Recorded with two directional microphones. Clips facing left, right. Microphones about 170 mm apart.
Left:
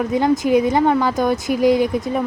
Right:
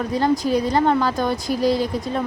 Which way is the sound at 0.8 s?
Centre (ahead or behind).